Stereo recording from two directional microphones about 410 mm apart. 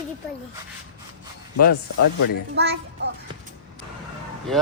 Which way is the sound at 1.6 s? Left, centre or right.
Left.